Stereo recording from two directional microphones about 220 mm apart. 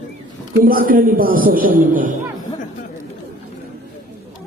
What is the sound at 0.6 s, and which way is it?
A man's voice, 40° right (ahead or behind).